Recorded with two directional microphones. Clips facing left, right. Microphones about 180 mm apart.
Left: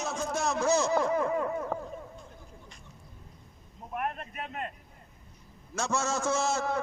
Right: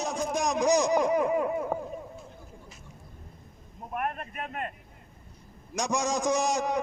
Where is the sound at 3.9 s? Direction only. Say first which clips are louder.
Right 2 dB; 55° right (ahead or behind).